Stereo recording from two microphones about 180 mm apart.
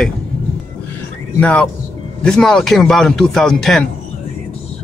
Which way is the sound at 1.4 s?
5° left (ahead or behind).